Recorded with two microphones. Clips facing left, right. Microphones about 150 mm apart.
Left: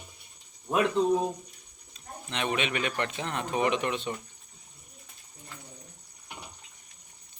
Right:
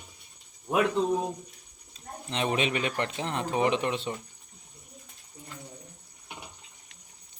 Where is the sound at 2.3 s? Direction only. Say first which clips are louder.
Right 2 dB; 35° right (ahead or behind).